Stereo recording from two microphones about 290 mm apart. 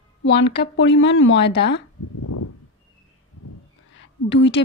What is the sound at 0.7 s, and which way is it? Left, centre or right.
Speech, left.